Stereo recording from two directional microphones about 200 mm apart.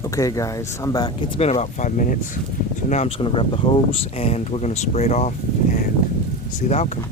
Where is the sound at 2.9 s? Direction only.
30° left (ahead or behind).